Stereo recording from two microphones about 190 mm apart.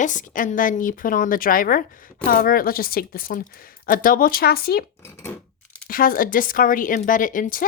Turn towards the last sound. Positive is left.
turn(degrees=45)  # may be behind; listen again after turning